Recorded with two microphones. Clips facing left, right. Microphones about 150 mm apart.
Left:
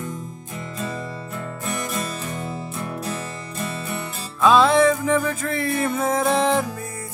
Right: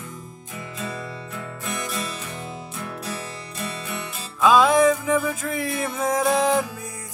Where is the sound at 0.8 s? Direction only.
45° left (ahead or behind).